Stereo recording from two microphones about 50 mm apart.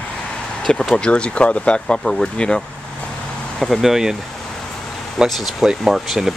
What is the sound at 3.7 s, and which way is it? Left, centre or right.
Speech, centre.